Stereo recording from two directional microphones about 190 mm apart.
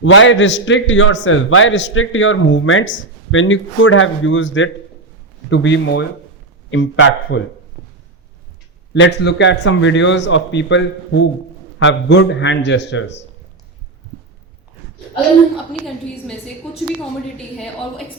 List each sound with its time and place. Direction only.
0.0 s a man's voice: 85° left
5.5 s speech: 75° left (ahead or behind)
6.7 s a man's voice: 90° left
8.9 s speech: 65° left (ahead or behind)
17.3 s a woman's voice: centre (ahead or behind)